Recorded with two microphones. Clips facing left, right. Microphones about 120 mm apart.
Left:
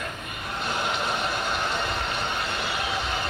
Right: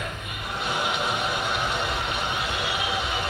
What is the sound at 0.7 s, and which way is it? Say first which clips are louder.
Music: right 1 dB; 10° right (ahead or behind).